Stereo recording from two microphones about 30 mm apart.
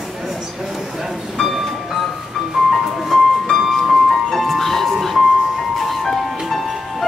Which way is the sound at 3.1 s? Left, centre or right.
Centre.